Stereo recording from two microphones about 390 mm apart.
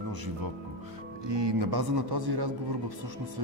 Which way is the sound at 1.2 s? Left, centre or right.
Right.